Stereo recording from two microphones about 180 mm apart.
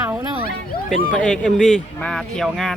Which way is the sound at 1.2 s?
5° left (ahead or behind).